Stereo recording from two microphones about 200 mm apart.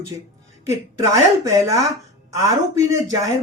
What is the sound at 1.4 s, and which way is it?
Speech, 15° right (ahead or behind).